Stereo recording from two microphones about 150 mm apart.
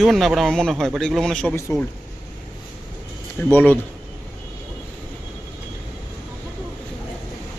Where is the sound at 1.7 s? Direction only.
20° left (ahead or behind).